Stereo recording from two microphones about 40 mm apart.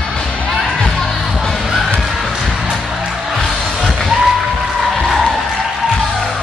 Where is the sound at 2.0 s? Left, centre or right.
Centre.